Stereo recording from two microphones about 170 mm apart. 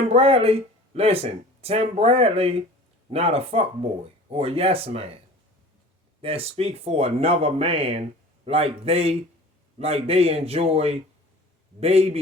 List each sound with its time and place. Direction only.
0.1 s speech: 35° right (ahead or behind)
6.2 s speech: 35° right (ahead or behind)